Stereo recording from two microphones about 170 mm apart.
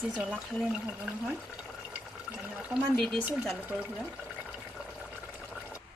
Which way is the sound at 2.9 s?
5° left (ahead or behind).